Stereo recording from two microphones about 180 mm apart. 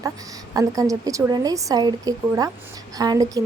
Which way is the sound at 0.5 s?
20° right (ahead or behind).